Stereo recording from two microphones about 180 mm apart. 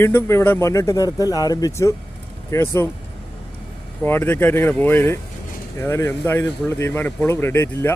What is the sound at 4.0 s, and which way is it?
Speech, 10° left (ahead or behind).